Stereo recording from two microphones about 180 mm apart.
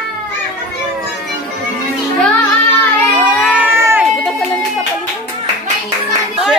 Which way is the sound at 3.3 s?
5° right (ahead or behind).